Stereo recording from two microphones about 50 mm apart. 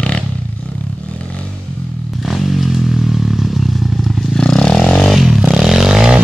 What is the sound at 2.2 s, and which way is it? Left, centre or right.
Vehicle, centre.